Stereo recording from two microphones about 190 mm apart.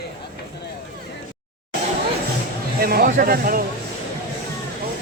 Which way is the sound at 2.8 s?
50° right (ahead or behind).